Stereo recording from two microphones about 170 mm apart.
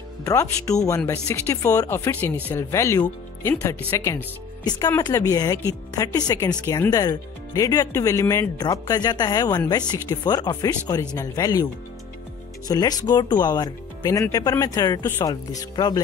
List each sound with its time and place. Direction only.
0.2 s speech: 20° left (ahead or behind)